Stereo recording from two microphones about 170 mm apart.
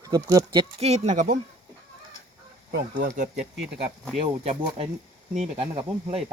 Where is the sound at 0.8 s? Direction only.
40° right (ahead or behind).